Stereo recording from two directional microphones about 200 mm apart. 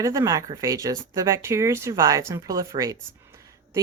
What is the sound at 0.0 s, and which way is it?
Speech, 15° right (ahead or behind).